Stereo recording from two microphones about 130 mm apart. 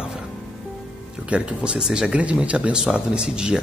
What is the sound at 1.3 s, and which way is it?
Speech, 10° right (ahead or behind).